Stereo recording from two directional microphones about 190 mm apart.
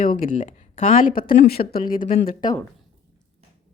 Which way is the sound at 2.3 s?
20° left (ahead or behind).